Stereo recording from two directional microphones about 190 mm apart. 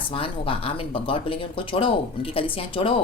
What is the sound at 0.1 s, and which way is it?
Speech, 30° left (ahead or behind).